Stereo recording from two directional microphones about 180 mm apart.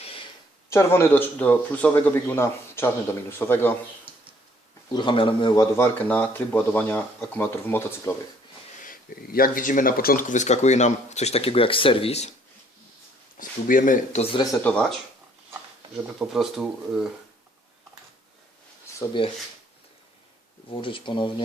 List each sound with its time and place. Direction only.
0.7 s a man's voice: 15° left (ahead or behind)
4.9 s speech: 25° left (ahead or behind)
5.7 s a man's voice: 10° left (ahead or behind)
8.8 s speech: 50° left (ahead or behind); by 12.3 s 35° left (ahead or behind)
13.3 s speech: 50° left (ahead or behind)
14.2 s speech: 30° left (ahead or behind)
14.6 s speech: 5° left (ahead or behind)
16.1 s speech: centre (ahead or behind)
19.2 s speech: 30° left (ahead or behind)
20.8 s speech: 30° left (ahead or behind)